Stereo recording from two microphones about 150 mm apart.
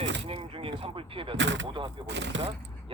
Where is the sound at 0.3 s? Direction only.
40° right (ahead or behind).